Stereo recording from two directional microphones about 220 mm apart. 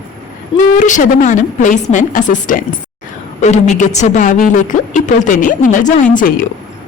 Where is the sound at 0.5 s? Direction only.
35° left (ahead or behind).